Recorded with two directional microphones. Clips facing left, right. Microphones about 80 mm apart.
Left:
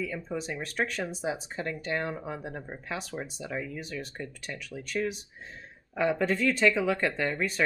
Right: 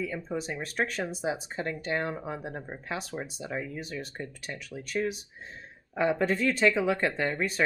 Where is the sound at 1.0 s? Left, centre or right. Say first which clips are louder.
Right 1 dB; centre.